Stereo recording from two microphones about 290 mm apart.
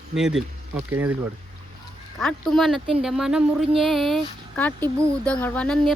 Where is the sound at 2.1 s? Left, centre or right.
Centre.